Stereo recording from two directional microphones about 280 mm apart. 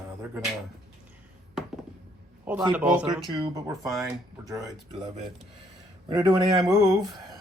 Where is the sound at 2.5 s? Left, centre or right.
Centre.